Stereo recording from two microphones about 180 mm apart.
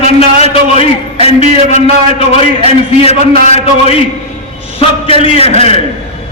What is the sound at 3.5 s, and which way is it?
A man's voice, 35° left (ahead or behind).